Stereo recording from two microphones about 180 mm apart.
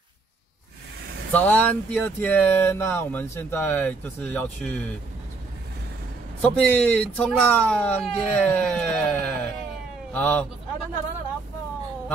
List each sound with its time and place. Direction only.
1.3 s speech: 10° left (ahead or behind)
6.4 s speech: 5° left (ahead or behind)